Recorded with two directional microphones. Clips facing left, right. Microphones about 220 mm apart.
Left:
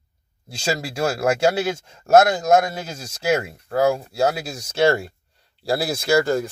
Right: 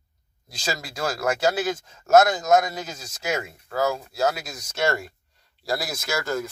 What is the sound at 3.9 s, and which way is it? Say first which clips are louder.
Speech: left 4 dB; 30° left (ahead or behind).